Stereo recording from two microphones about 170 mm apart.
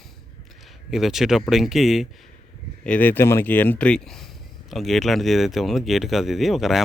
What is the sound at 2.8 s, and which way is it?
Speech, 10° left (ahead or behind).